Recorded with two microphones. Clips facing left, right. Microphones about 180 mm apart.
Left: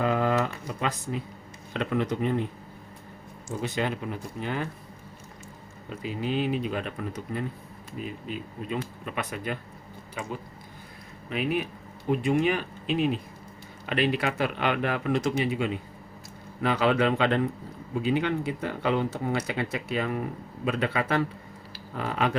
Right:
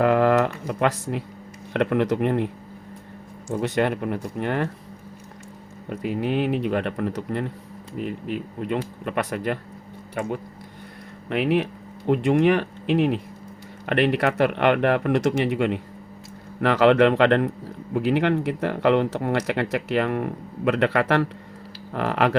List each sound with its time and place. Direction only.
0.0 s a sound: 70° right (ahead or behind)
0.7 s speech: 70° right (ahead or behind)
3.5 s speech: 65° right (ahead or behind)
5.9 s speech: 60° right (ahead or behind)
11.3 s speech: 75° right (ahead or behind)